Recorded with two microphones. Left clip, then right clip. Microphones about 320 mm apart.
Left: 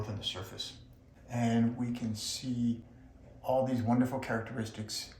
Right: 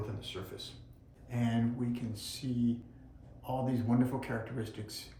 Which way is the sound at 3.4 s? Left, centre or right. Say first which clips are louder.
Left 5 dB; left.